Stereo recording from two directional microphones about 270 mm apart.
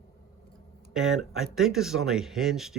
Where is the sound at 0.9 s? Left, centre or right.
Centre.